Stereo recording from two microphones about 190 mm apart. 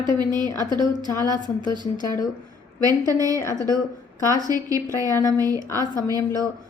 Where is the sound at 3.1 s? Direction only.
20° right (ahead or behind).